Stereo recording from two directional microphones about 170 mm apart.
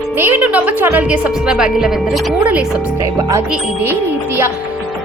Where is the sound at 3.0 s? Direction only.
20° right (ahead or behind).